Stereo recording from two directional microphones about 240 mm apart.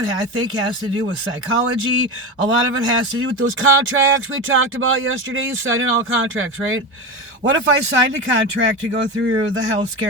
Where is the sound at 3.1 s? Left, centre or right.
Right.